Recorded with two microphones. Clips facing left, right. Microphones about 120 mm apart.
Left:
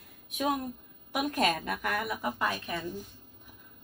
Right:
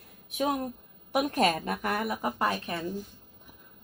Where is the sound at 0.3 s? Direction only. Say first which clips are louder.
Right 2 dB; 25° right (ahead or behind).